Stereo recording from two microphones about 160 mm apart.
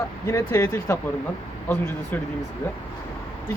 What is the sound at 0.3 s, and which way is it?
Speech, 15° left (ahead or behind).